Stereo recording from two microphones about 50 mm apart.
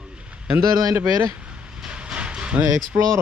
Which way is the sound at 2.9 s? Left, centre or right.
Right.